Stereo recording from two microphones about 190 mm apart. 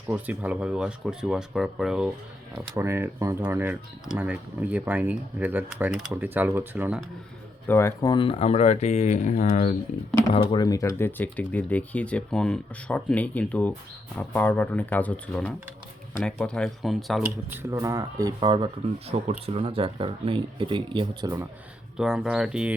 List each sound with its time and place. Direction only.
0.1 s speech: 5° right (ahead or behind)
2.7 s speech: 15° right (ahead or behind)
7.7 s speech: 15° left (ahead or behind); by 9.7 s 40° left (ahead or behind)
10.3 s speech: 25° left (ahead or behind); by 17.2 s centre (ahead or behind)
17.2 s speech: 10° right (ahead or behind)
21.9 s speech: 5° right (ahead or behind)